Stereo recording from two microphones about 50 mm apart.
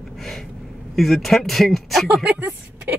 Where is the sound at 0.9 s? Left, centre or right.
Centre.